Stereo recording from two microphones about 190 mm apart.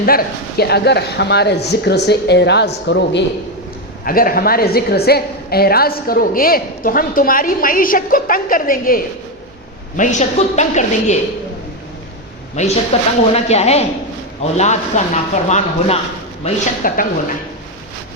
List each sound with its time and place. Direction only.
0.0 s speech: 50° left (ahead or behind); by 3.2 s 65° left (ahead or behind)
4.0 s a woman's voice: 50° left (ahead or behind)
12.9 s a woman's voice: 30° left (ahead or behind)